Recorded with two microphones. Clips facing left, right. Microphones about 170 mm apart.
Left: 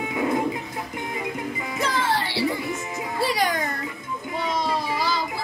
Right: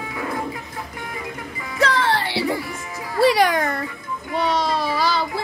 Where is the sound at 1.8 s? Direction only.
65° right (ahead or behind).